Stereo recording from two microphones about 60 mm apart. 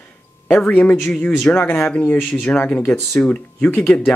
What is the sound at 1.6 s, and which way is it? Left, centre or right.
Speech, left.